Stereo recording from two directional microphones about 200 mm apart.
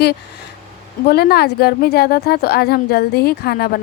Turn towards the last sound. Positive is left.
turn(degrees=50)  # may be behind; listen again after turning